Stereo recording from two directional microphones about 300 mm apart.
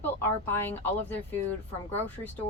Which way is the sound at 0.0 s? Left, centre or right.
Centre.